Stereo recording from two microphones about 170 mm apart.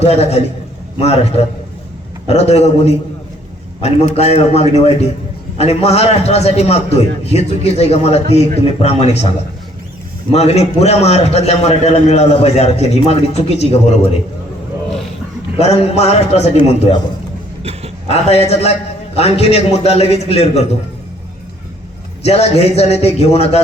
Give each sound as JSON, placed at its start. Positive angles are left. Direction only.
{"t": 0.0, "sound": "a man's voice", "side_deg": 40}
{"t": 10.3, "sound": "a man's voice", "side_deg": 40}
{"t": 15.5, "sound": "a man's voice", "side_deg": 40}
{"t": 17.6, "sound": "a sound", "side_deg": -35}
{"t": 18.1, "sound": "a man's voice", "side_deg": 40}
{"t": 22.2, "sound": "a man's voice", "side_deg": 40}